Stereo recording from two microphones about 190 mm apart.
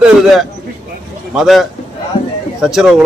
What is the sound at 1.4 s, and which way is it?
Speech, centre (ahead or behind).